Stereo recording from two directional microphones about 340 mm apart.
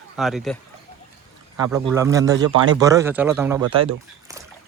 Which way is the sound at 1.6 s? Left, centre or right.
Centre.